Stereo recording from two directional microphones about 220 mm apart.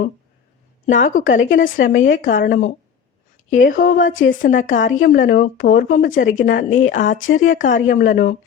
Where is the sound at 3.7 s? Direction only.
35° left (ahead or behind).